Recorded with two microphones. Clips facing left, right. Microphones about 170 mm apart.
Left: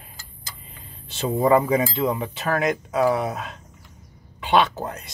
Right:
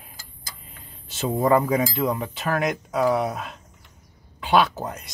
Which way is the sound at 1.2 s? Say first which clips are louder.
Left 1 dB; centre (ahead or behind).